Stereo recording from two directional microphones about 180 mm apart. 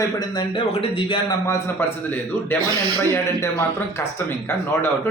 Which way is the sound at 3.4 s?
15° left (ahead or behind).